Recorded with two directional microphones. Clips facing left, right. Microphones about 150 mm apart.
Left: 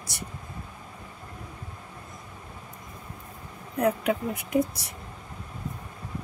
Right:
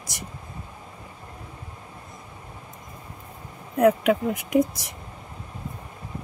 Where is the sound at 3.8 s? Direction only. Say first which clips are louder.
Right 6 dB; 90° right.